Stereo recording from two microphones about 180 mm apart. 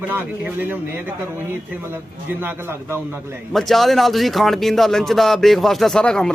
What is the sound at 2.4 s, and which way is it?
Speech, 10° right (ahead or behind).